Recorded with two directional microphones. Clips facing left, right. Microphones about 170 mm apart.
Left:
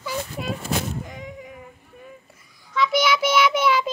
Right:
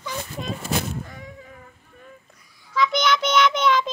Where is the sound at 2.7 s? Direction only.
5° left (ahead or behind).